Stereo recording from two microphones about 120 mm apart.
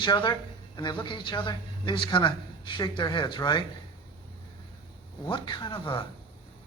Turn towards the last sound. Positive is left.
turn(degrees=45)  # may be behind; listen again after turning